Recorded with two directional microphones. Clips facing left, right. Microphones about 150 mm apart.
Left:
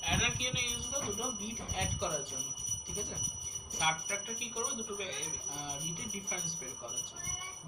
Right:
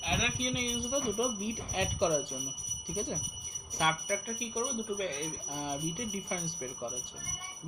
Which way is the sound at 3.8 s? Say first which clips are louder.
Right 4 dB; 60° right (ahead or behind).